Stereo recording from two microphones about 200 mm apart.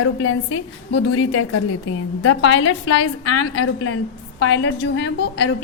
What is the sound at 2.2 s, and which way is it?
A woman's voice, 85° left.